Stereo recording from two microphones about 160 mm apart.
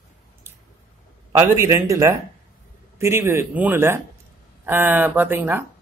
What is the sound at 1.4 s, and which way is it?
Speech, 20° right (ahead or behind).